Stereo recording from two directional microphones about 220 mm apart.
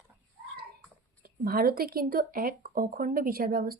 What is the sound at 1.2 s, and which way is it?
Speech, 45° right (ahead or behind).